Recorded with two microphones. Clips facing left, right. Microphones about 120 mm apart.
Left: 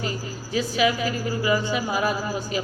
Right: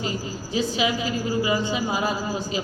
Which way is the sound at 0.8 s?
25° right (ahead or behind).